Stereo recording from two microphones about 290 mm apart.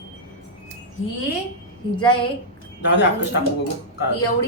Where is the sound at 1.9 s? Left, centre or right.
Centre.